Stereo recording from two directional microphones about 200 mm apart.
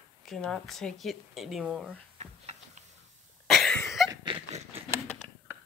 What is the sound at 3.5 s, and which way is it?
Cough, centre (ahead or behind).